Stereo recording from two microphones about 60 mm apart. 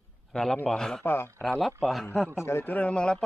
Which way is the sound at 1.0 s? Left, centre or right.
Left.